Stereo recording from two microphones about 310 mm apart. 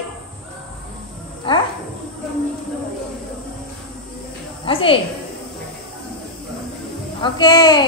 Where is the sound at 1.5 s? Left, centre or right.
Centre.